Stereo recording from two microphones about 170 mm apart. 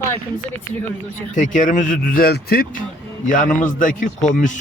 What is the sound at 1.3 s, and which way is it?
A man's voice, 50° left (ahead or behind).